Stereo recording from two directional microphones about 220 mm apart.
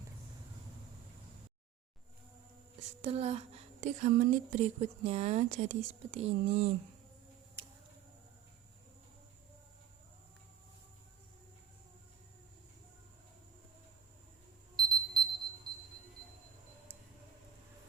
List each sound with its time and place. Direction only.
3.0 s a woman's voice: 30° right (ahead or behind)
14.9 s clock: centre (ahead or behind)